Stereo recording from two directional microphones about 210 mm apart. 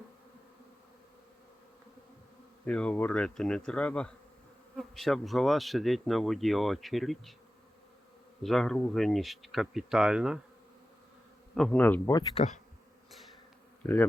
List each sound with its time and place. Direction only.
2.6 s speech: 5° left (ahead or behind)
8.4 s speech: centre (ahead or behind)
11.5 s speech: 5° left (ahead or behind)
12.3 s insect: 30° left (ahead or behind)
13.1 s bee: centre (ahead or behind)
13.8 s speech: 10° left (ahead or behind)